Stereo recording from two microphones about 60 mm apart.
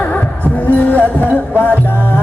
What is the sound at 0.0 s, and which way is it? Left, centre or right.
Music, left.